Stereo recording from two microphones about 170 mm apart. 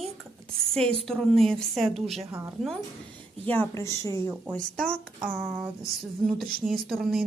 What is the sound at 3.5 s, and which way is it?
Speech, 15° left (ahead or behind).